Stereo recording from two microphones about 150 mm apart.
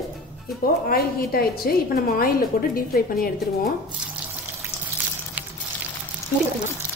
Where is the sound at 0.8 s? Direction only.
85° left.